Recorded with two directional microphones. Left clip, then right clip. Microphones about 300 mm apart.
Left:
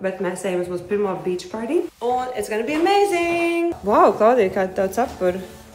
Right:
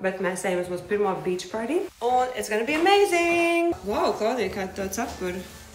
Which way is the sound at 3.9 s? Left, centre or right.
Left.